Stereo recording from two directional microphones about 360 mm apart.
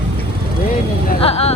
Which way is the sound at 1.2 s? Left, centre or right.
Centre.